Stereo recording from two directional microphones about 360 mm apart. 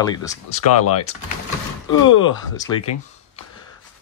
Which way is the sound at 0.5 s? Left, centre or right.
Left.